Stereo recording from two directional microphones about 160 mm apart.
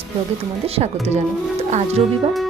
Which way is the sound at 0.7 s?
40° right (ahead or behind).